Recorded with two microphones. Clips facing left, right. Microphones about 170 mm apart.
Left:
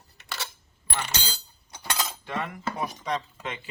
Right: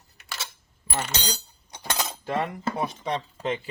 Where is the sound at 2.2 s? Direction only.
35° right (ahead or behind).